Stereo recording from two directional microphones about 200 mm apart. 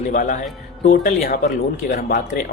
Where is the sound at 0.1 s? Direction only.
40° left (ahead or behind).